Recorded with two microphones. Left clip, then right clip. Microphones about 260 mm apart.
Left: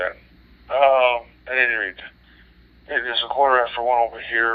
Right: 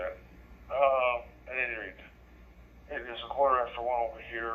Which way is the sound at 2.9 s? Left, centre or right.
Left.